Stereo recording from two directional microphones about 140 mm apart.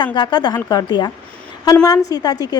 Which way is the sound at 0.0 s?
35° left (ahead or behind).